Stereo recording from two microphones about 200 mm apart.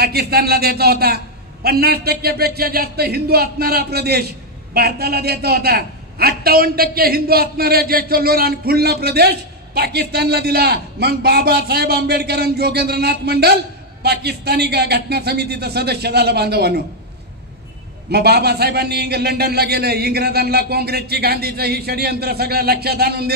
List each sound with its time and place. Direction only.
0.0 s a man's voice: 50° right (ahead or behind)
18.1 s a man's voice: 55° right (ahead or behind)